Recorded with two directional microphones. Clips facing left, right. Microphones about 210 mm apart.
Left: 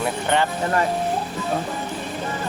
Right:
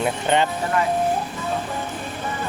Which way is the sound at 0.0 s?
20° right (ahead or behind).